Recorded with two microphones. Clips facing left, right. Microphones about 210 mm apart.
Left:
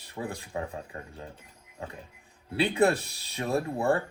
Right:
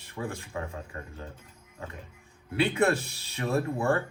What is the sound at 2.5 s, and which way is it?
Speech, 30° left (ahead or behind).